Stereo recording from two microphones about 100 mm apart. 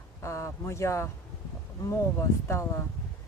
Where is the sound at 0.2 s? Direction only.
30° left (ahead or behind).